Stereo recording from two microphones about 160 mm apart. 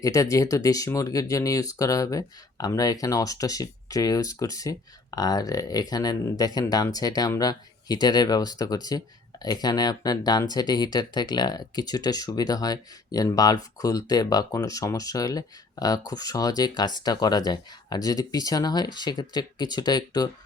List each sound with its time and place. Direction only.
0.0 s speech: 20° left (ahead or behind)